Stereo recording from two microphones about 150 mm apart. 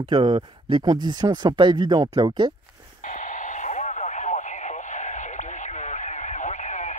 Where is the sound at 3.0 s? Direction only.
60° left (ahead or behind).